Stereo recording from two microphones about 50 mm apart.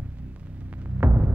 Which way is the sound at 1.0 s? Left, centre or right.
Right.